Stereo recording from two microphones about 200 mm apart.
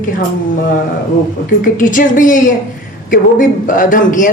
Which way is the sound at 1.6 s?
40° left (ahead or behind).